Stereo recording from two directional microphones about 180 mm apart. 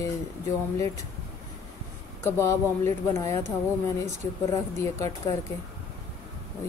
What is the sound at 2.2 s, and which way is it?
Speech, 15° left (ahead or behind).